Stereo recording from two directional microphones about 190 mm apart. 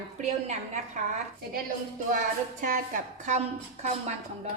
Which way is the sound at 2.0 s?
45° right (ahead or behind).